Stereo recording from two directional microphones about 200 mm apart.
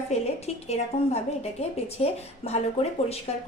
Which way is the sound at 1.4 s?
30° left (ahead or behind).